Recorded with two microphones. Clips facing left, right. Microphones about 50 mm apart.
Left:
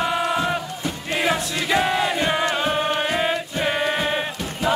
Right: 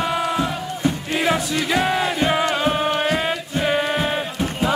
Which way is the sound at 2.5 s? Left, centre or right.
Centre.